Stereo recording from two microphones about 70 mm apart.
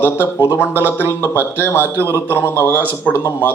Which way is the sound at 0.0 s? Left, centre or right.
Right.